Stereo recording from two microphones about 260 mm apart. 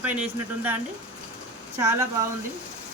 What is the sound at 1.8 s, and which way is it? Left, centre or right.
Speech, centre.